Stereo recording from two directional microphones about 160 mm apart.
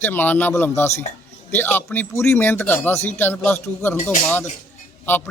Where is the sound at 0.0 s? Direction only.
10° left (ahead or behind).